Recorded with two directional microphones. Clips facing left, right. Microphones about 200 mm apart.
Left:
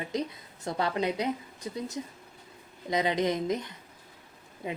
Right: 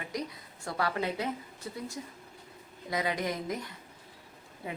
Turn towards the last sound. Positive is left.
turn(degrees=15)  # may be behind; listen again after turning